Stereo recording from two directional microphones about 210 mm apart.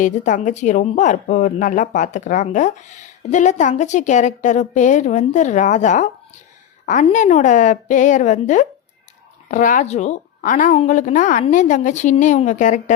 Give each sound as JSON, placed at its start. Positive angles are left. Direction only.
{"t": 0.0, "sound": "a woman's voice", "side_deg": 35}